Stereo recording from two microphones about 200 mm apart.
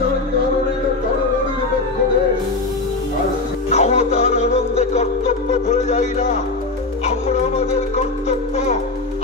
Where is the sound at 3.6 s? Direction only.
35° left (ahead or behind).